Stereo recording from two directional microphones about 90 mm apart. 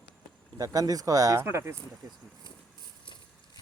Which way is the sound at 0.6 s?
45° right (ahead or behind).